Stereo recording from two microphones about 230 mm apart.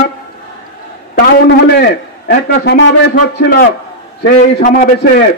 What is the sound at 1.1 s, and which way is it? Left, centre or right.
A man's voice, left.